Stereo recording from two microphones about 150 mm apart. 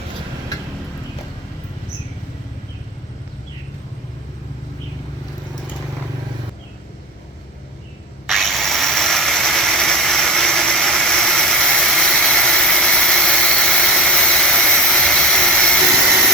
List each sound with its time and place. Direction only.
8.3 s engine: centre (ahead or behind)